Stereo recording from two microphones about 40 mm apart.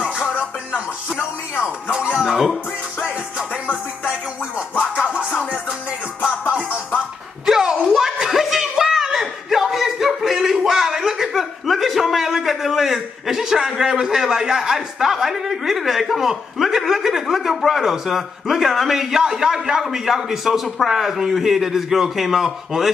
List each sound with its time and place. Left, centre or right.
1.6 s speech: right
2.2 s a man's voice: centre
5.0 s music: right
7.4 s a sound: centre
13.4 s a man's voice: centre